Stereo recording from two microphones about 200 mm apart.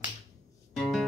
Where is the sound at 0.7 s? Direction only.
Centre (ahead or behind).